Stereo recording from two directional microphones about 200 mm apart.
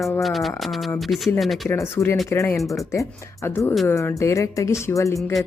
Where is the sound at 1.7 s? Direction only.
15° left (ahead or behind).